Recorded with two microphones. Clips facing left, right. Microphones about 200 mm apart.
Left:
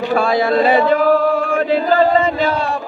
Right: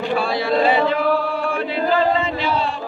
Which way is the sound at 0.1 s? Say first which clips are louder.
Left 7 dB; 50° left (ahead or behind).